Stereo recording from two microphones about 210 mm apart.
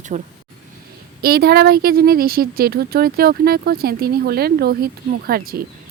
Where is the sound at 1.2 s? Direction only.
50° right (ahead or behind).